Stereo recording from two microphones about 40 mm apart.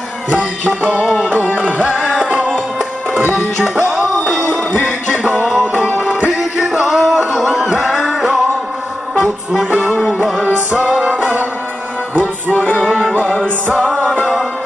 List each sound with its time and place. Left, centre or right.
2.0 s music: centre
3.8 s music: centre
5.4 s music: centre
10.0 s music: centre
10.8 s music: right
12.2 s music: left
13.3 s music: centre